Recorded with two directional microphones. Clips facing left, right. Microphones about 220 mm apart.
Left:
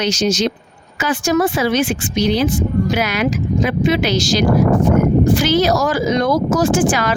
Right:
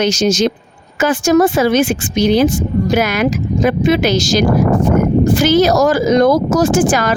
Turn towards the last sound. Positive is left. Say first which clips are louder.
# right 3 dB
turn(degrees=-45)  # may be behind; listen again after turning